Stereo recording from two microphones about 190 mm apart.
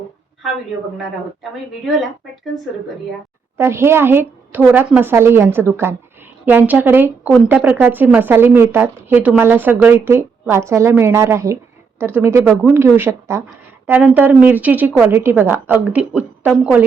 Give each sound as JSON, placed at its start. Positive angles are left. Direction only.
{"t": 1.9, "sound": "speech", "side_deg": 0}
{"t": 3.6, "sound": "a woman's voice", "side_deg": -15}